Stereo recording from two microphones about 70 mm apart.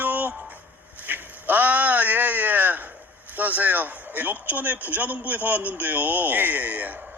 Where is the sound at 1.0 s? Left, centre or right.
Right.